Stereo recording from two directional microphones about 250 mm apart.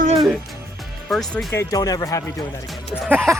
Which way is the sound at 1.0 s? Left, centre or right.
Centre.